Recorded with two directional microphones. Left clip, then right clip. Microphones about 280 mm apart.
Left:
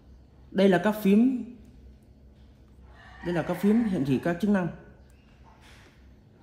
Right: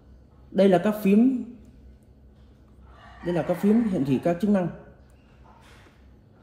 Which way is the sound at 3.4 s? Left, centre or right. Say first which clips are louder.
Right 3 dB; centre.